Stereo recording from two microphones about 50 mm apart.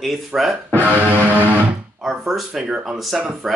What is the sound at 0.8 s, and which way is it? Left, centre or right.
Music, right.